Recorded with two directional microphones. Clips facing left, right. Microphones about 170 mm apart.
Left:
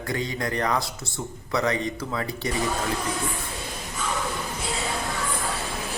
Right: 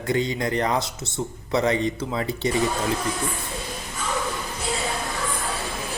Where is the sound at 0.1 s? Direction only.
20° right (ahead or behind).